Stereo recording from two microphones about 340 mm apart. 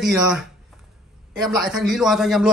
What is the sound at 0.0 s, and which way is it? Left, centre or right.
Speech, centre.